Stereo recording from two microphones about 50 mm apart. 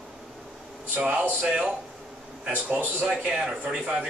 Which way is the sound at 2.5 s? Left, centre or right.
Right.